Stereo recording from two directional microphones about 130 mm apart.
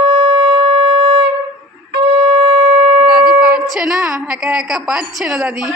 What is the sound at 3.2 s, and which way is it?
A woman's voice, 5° right (ahead or behind).